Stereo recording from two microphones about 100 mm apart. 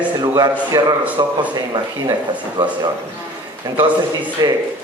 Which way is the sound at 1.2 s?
40° right (ahead or behind).